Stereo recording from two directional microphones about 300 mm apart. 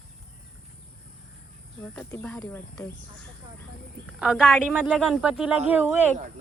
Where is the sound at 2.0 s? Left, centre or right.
Centre.